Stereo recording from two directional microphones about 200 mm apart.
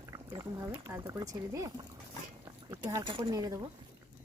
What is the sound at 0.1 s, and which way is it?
Speech, 20° right (ahead or behind).